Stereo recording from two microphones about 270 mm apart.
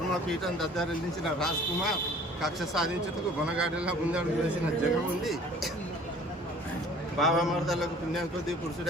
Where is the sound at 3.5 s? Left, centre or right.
Centre.